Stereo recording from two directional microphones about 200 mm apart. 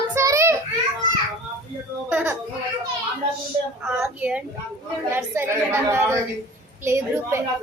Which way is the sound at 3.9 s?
5° right (ahead or behind).